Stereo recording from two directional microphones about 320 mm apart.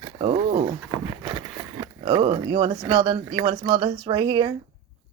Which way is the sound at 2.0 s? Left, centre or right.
Centre.